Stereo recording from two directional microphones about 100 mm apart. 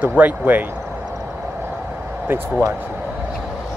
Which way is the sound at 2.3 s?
20° right (ahead or behind).